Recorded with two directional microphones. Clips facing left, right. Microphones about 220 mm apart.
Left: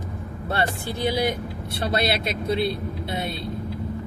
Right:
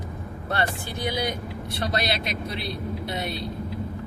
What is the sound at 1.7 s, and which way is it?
Speech, 30° left (ahead or behind).